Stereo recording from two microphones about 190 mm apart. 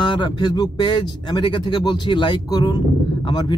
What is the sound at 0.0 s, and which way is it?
Speech, 25° left (ahead or behind).